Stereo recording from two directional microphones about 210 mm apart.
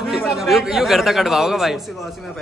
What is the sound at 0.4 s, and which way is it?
A man's voice, centre (ahead or behind).